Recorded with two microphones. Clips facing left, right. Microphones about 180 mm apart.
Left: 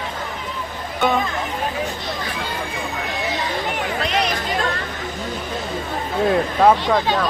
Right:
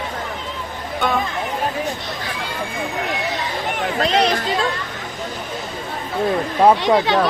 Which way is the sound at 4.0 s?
35° right (ahead or behind).